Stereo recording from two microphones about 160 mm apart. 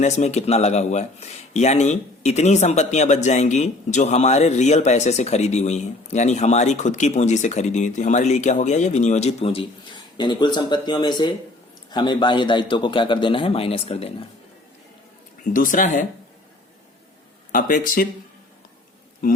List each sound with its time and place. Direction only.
0.0 s a man's voice: 45° left (ahead or behind)
15.4 s speech: 55° left (ahead or behind)
17.5 s speech: 55° left (ahead or behind)